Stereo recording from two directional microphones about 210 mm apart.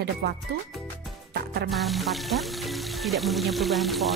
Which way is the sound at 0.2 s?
50° right (ahead or behind).